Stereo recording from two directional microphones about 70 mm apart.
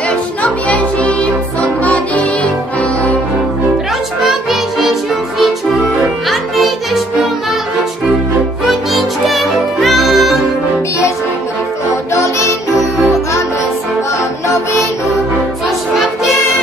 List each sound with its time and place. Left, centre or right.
0.4 s music: centre
4.2 s music: centre
6.2 s music: centre
8.6 s music: centre